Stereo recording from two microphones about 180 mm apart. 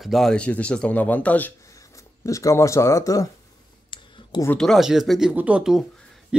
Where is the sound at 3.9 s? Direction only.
25° left (ahead or behind).